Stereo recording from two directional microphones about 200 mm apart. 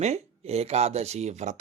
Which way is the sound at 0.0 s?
30° right (ahead or behind).